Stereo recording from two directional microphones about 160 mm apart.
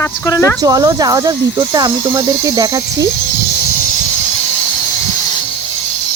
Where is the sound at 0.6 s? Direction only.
20° right (ahead or behind).